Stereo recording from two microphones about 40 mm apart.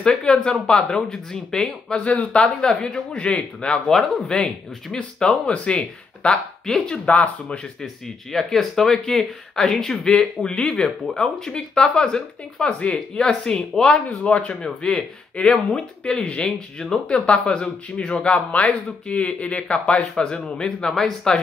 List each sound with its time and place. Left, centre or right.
0.0 s speech: centre
2.0 s speech: left
6.3 s speech: centre
10.1 s speech: left
14.0 s a man's voice: left
14.5 s speech: centre